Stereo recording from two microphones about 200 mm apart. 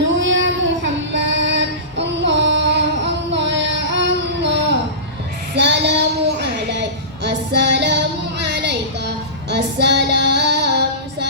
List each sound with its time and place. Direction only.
0.2 s child singing: 65° right (ahead or behind)